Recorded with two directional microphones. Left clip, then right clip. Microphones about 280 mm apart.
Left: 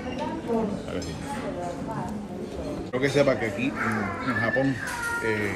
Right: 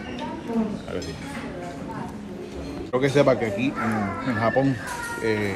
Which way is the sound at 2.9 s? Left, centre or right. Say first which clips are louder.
Right 3 dB; centre.